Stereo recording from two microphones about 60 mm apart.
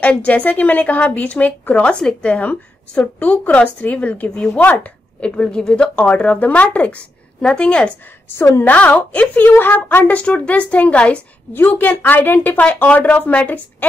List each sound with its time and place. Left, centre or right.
0.0 s speech: left
11.5 s speech: left